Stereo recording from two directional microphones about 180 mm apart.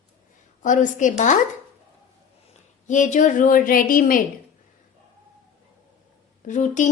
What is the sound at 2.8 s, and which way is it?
A woman's voice, 45° left (ahead or behind).